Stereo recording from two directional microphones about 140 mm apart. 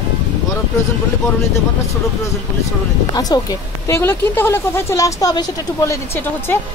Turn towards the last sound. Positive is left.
turn(degrees=20)  # may be behind; listen again after turning